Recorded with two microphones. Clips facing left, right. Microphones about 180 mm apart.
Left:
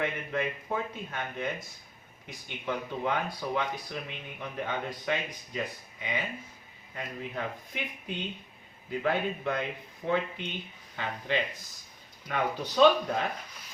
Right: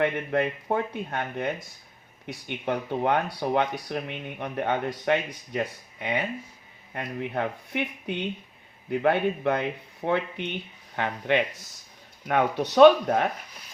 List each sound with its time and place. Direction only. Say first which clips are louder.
0.0 s speech: right 7 dB; 60° right (ahead or behind)
2.9 s speech: right 7 dB; 60° right (ahead or behind)